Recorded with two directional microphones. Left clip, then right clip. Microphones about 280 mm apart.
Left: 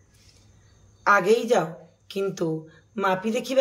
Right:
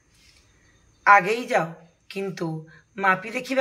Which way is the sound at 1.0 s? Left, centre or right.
Centre.